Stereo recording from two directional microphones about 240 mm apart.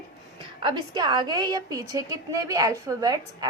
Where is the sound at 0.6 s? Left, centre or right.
Centre.